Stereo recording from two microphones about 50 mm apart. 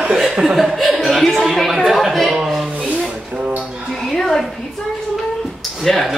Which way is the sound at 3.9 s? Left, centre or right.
Centre.